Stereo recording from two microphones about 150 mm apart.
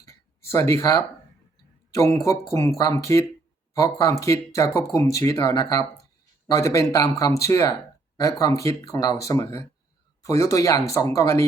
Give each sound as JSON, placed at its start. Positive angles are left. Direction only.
{"t": 0.0, "sound": "speech", "side_deg": 20}